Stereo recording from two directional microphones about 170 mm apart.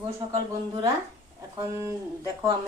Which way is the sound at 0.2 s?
30° right (ahead or behind).